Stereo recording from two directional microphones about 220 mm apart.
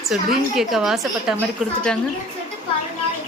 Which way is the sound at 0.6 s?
Centre (ahead or behind).